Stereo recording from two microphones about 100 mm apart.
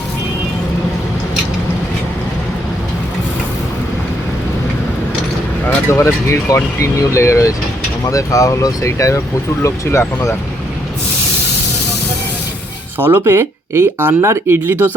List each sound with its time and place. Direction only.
5.6 s speech: 25° left (ahead or behind)
13.0 s speech: 25° right (ahead or behind)